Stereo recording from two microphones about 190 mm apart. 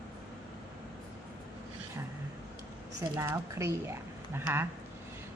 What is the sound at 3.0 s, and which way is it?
Speech, 15° right (ahead or behind).